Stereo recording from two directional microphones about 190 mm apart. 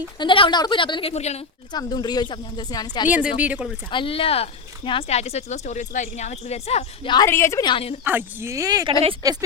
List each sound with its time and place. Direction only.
0.2 s a woman's voice: 25° left (ahead or behind)
1.7 s a woman's voice: 20° left (ahead or behind)
3.1 s speech: 5° right (ahead or behind)
3.9 s speech: 30° left (ahead or behind)
7.3 s a woman's voice: 15° left (ahead or behind)
8.0 s speech: 10° right (ahead or behind)